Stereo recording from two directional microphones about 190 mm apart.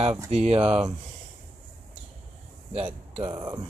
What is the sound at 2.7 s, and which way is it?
Speech, 30° right (ahead or behind).